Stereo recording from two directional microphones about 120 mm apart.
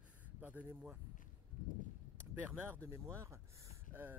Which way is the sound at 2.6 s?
20° right (ahead or behind).